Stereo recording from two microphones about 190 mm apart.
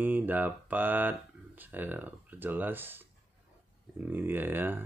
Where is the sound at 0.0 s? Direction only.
10° right (ahead or behind).